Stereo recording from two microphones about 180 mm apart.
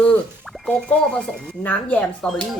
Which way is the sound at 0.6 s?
5° left (ahead or behind).